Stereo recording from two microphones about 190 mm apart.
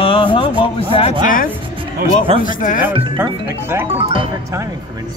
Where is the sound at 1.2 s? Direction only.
45° left (ahead or behind).